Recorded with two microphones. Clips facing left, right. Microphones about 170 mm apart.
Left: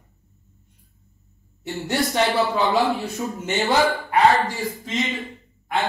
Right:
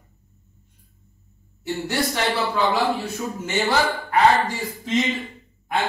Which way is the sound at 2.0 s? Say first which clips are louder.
Left 4 dB; 20° left (ahead or behind).